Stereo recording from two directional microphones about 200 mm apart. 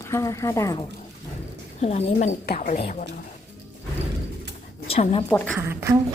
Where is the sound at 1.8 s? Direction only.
30° left (ahead or behind).